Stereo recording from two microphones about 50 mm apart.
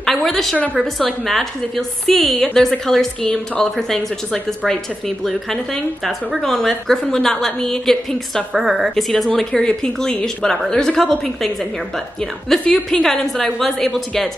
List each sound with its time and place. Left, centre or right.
0.0 s a woman's voice: centre
8.5 s a woman's voice: centre
8.9 s a woman's voice: centre
11.0 s a woman's voice: centre